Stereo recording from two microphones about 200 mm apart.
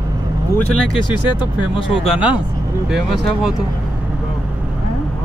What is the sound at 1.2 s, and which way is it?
Speech, 25° left (ahead or behind).